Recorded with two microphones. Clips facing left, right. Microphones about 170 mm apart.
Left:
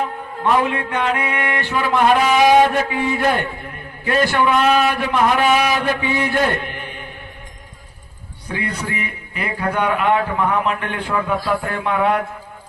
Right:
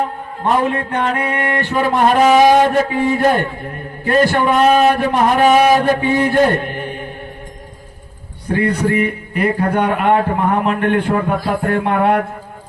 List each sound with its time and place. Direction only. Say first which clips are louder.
0.0 s music: right 2 dB; 40° right (ahead or behind)
8.4 s music: right 9 dB; 50° right (ahead or behind)